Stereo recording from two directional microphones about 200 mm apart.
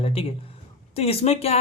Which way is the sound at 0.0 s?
30° left (ahead or behind).